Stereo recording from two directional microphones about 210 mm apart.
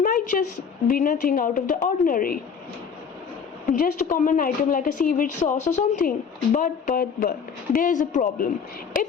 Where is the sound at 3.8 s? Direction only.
40° left (ahead or behind).